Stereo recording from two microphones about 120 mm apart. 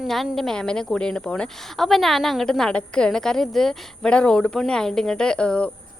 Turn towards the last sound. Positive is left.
turn(degrees=10)  # may be behind; listen again after turning